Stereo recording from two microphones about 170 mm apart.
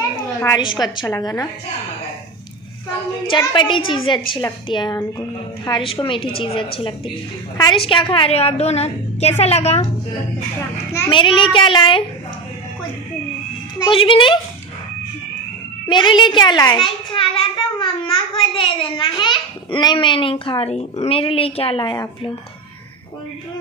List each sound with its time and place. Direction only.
0.7 s a child's voice: 25° left (ahead or behind)
3.3 s a child's voice: 30° left (ahead or behind)
11.1 s a child's voice: 30° left (ahead or behind)
13.7 s a child's voice: 30° left (ahead or behind)
15.9 s a child's voice: 30° left (ahead or behind)